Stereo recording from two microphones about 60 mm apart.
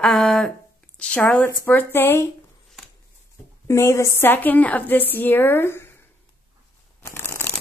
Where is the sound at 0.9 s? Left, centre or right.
Centre.